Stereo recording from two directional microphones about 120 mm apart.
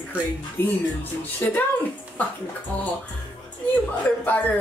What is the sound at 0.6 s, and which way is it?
Speech, 20° left (ahead or behind).